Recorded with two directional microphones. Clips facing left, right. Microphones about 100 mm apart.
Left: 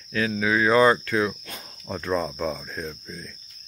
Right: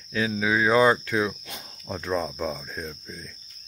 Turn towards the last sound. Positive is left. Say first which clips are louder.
# left 2 dB
turn(degrees=-10)  # may be behind; listen again after turning